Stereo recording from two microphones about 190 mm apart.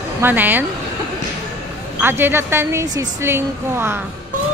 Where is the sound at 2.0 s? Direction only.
10° right (ahead or behind).